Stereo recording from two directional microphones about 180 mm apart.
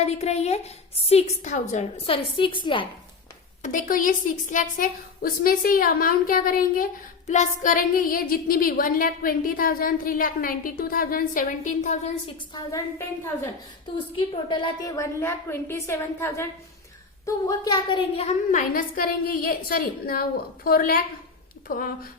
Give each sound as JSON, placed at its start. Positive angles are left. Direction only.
{"t": 0.0, "sound": "a woman's voice", "side_deg": 35}
{"t": 3.6, "sound": "a woman's voice", "side_deg": 45}
{"t": 12.5, "sound": "a woman's voice", "side_deg": 15}
{"t": 14.2, "sound": "a woman's voice", "side_deg": 25}
{"t": 17.2, "sound": "a woman's voice", "side_deg": 25}